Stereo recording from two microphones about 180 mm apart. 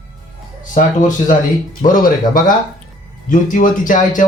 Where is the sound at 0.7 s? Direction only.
45° left (ahead or behind).